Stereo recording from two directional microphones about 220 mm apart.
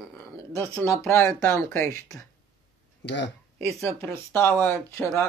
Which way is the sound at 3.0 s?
55° left (ahead or behind).